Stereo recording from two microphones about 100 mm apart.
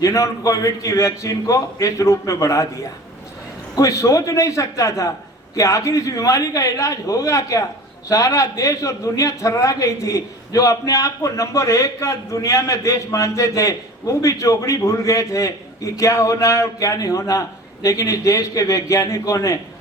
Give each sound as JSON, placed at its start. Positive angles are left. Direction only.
{"t": 0.0, "sound": "a man's voice", "side_deg": 35}
{"t": 3.8, "sound": "a man's voice", "side_deg": 30}